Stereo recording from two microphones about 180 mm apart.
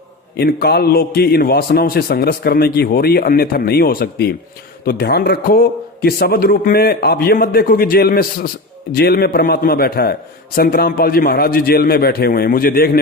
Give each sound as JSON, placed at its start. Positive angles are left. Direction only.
{"t": 0.3, "sound": "a man's voice", "side_deg": 60}